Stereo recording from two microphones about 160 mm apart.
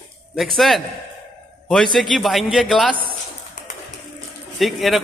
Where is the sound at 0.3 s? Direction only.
Centre (ahead or behind).